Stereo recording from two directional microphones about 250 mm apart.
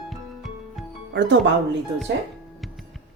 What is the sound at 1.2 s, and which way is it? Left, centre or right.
Speech, right.